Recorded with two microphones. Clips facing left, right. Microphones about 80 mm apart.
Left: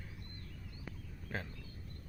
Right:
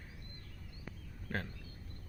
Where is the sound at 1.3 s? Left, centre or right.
Right.